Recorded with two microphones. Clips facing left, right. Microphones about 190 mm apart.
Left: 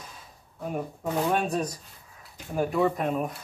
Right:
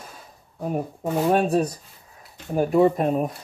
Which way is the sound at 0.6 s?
35° right (ahead or behind).